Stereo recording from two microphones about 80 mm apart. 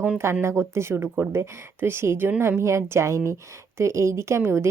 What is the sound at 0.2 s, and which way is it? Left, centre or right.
Speech, right.